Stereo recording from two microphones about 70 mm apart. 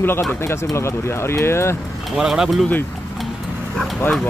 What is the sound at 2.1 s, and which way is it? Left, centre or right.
Speech, centre.